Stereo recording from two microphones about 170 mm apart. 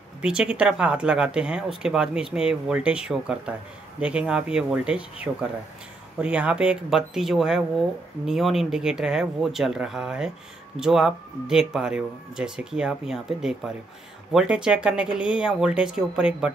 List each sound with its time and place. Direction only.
0.2 s speech: 5° right (ahead or behind)
6.2 s speech: 5° right (ahead or behind)